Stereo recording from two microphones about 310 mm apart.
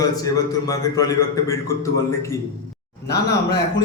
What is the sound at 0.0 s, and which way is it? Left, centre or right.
A man's voice, centre.